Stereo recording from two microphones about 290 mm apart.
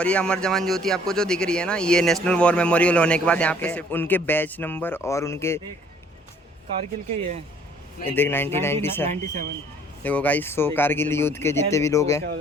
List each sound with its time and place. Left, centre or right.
0.0 s speech: centre
8.1 s speech: centre
9.0 s speech: right
10.0 s speech: centre